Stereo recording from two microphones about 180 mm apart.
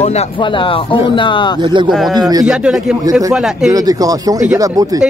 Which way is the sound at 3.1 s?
20° right (ahead or behind).